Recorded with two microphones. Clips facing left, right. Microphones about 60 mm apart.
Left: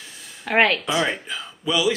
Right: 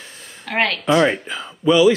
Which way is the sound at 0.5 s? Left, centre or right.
Centre.